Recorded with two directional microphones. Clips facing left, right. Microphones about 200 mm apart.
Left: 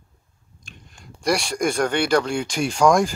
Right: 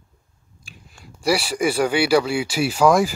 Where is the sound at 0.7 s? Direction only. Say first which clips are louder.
Even; 5° right (ahead or behind).